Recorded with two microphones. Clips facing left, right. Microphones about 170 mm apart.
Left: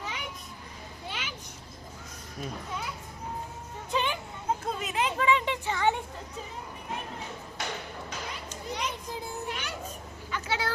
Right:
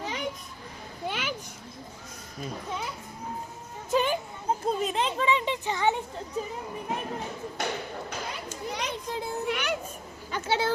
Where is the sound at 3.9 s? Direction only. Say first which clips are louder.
Right 5 dB; 45° right (ahead or behind).